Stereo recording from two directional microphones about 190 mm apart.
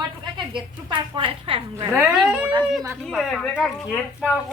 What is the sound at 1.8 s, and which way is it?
Speech, 15° right (ahead or behind).